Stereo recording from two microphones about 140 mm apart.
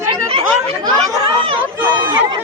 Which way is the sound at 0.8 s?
35° right (ahead or behind).